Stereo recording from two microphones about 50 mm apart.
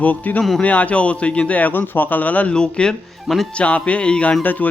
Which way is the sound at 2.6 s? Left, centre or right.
Centre.